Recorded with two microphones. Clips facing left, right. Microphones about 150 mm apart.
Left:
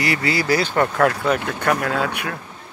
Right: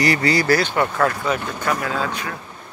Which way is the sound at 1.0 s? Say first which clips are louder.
Left 2 dB; 65° left (ahead or behind).